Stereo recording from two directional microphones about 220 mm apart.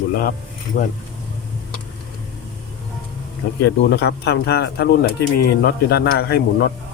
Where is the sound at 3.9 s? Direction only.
50° left (ahead or behind).